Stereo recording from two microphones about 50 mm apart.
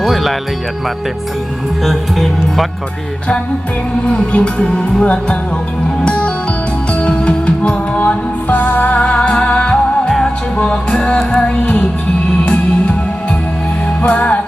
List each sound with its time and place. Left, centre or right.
0.0 s music: centre
1.8 s speech: centre
4.0 s music: left
10.1 s music: centre
10.6 s music: centre
14.0 s music: left